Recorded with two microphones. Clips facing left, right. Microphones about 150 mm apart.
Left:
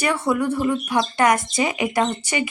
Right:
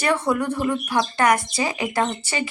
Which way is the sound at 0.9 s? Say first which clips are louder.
Even; 20° left (ahead or behind).